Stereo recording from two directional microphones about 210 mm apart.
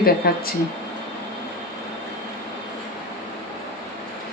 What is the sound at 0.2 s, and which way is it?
Speech, 45° left (ahead or behind).